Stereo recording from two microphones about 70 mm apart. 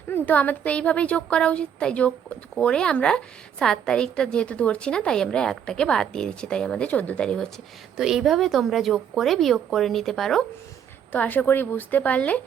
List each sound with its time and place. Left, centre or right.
0.1 s a woman's voice: left
7.9 s a woman's voice: centre
11.1 s a woman's voice: left